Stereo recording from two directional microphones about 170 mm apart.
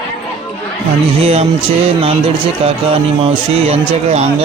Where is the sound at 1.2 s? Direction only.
35° right (ahead or behind).